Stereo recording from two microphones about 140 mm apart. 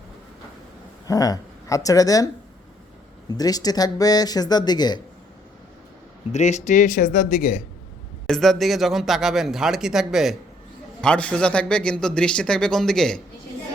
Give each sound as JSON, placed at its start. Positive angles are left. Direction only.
{"t": 1.0, "sound": "speech", "side_deg": 25}
{"t": 6.3, "sound": "speech", "side_deg": 55}
{"t": 8.3, "sound": "speech", "side_deg": 0}
{"t": 11.0, "sound": "a man's voice", "side_deg": 10}